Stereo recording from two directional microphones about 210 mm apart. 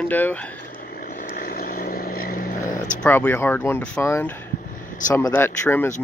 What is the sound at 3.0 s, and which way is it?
Speech, 5° left (ahead or behind).